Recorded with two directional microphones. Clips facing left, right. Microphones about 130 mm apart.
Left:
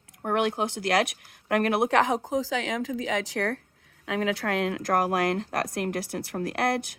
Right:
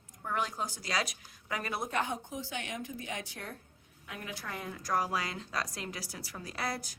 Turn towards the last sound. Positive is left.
turn(degrees=65)  # may be behind; listen again after turning